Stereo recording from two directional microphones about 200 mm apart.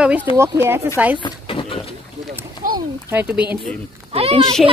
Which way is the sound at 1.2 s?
25° left (ahead or behind).